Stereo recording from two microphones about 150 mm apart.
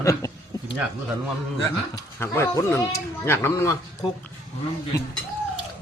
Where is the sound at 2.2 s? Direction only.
15° left (ahead or behind).